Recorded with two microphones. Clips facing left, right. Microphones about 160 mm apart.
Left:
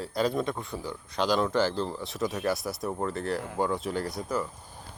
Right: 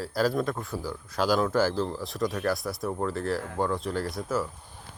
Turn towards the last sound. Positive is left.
turn(degrees=0)  # may be behind; listen again after turning